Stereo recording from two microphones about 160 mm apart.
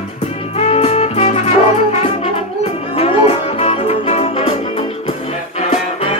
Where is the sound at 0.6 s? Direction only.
40° left (ahead or behind).